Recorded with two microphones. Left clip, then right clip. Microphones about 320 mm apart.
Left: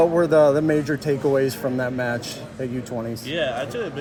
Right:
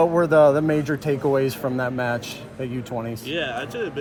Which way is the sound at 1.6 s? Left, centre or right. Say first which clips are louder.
Left 1 dB; right.